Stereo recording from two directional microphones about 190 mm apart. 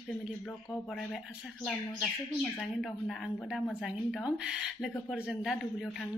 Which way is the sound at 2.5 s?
Centre (ahead or behind).